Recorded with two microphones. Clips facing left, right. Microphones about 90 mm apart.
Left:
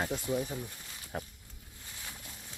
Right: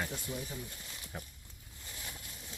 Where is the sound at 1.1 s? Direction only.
50° left (ahead or behind).